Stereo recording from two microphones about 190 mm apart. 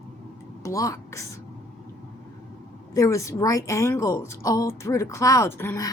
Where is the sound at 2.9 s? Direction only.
15° left (ahead or behind).